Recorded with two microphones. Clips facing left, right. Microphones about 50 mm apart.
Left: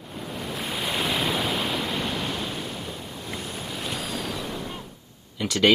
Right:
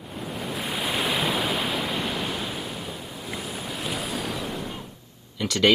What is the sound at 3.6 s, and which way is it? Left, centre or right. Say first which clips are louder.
Waves: right 2 dB; centre.